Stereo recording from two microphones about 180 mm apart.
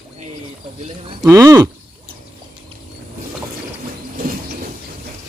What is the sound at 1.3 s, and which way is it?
Speech, 15° right (ahead or behind).